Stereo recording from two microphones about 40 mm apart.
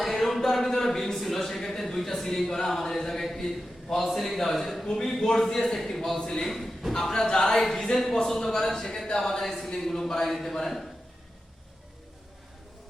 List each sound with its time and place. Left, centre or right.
0.0 s a sound: centre
4.9 s a man's voice: centre
6.4 s a man's voice: centre
7.1 s a man's voice: centre
7.6 s a man's voice: centre